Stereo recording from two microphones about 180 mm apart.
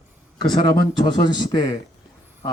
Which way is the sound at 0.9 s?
25° left (ahead or behind).